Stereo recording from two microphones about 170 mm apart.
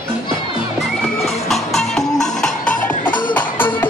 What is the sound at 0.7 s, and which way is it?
Music, centre (ahead or behind).